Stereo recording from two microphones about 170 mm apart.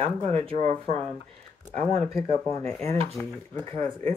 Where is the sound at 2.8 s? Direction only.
35° right (ahead or behind).